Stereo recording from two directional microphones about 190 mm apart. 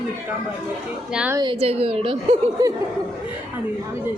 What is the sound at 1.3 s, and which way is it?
A woman's voice, 25° right (ahead or behind).